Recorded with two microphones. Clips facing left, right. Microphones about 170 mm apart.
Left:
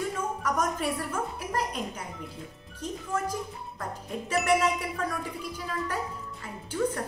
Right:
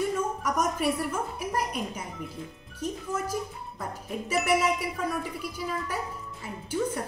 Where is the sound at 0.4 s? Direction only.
10° right (ahead or behind).